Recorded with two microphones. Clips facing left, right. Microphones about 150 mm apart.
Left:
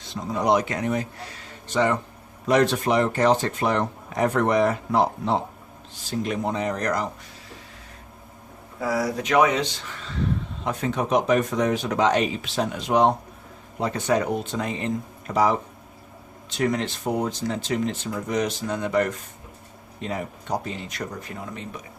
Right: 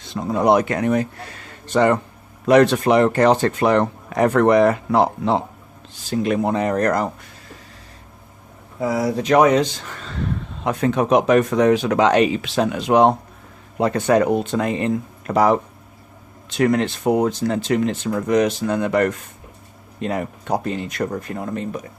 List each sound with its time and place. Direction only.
0.1 s speech: 55° right (ahead or behind)
2.5 s speech: 75° right (ahead or behind)
6.1 s speech: 65° right (ahead or behind)
8.8 s speech: 25° right (ahead or behind); by 10.2 s 45° right (ahead or behind)
10.6 s speech: 65° right (ahead or behind)
16.6 s speech: 60° right (ahead or behind); by 21.8 s 45° right (ahead or behind)